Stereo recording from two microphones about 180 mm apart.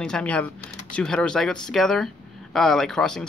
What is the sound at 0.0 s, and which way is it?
Speech, 5° left (ahead or behind).